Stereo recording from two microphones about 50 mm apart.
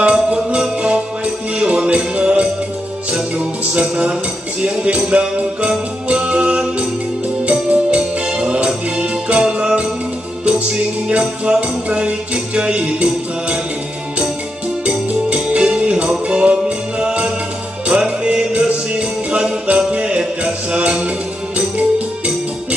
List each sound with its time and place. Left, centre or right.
0.0 s music: centre
3.9 s music: right
11.1 s music: right
14.9 s music: right